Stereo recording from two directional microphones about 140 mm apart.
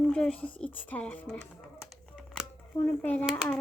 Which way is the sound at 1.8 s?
5° left (ahead or behind).